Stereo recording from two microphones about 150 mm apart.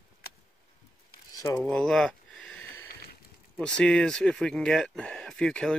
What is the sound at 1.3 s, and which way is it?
Speech, 25° left (ahead or behind).